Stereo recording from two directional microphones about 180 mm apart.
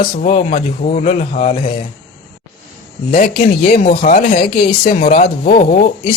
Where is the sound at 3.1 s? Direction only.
55° left (ahead or behind).